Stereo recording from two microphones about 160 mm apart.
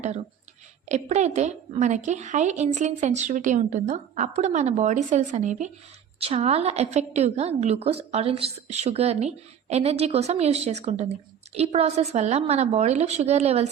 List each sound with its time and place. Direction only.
0.9 s a woman's voice: 45° right (ahead or behind)
6.1 s a woman's voice: 40° right (ahead or behind)